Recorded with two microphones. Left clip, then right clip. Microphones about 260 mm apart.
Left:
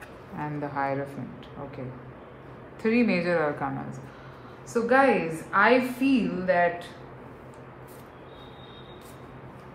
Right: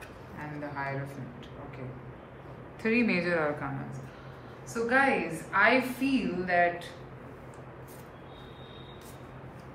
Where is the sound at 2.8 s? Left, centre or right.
Centre.